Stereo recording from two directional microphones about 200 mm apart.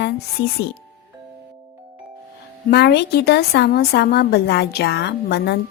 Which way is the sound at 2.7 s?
55° left (ahead or behind).